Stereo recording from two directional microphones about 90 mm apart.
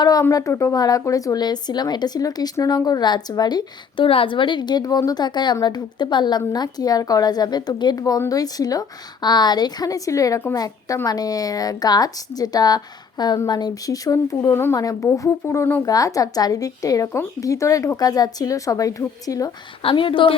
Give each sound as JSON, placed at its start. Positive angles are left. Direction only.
{"t": 0.0, "sound": "speech", "side_deg": 45}
{"t": 4.0, "sound": "a woman's voice", "side_deg": 80}
{"t": 14.5, "sound": "speech", "side_deg": 25}
{"t": 14.8, "sound": "speech", "side_deg": 40}
{"t": 15.8, "sound": "speech", "side_deg": 40}
{"t": 19.8, "sound": "speech", "side_deg": 75}